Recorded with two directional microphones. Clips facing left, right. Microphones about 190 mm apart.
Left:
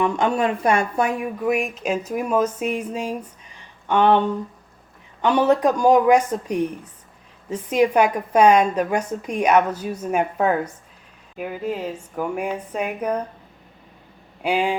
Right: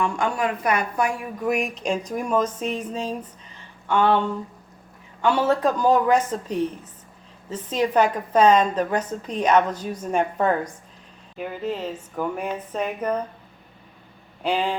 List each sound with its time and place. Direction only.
0.0 s speech: 20° left (ahead or behind)
1.4 s a woman's voice: centre (ahead or behind)
14.4 s a woman's voice: 10° left (ahead or behind)